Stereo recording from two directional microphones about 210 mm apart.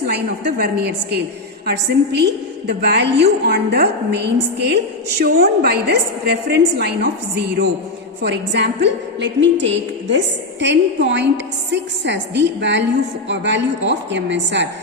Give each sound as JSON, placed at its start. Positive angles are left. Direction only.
{"t": 0.6, "sound": "a woman's voice", "side_deg": -50}